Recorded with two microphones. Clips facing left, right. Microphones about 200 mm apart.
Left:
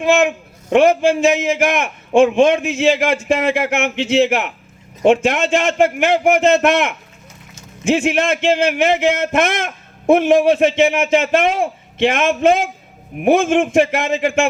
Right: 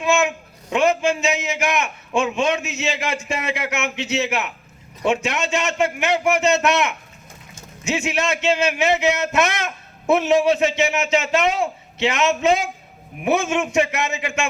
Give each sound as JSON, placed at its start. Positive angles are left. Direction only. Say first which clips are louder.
{"t": 0.3, "sound": "a man's voice", "louder": "left 8 dB", "side_deg": 55}
{"t": 7.9, "sound": "a man's voice", "louder": "left 4 dB", "side_deg": 50}
{"t": 13.8, "sound": "a man's voice", "louder": "left 7 dB", "side_deg": 50}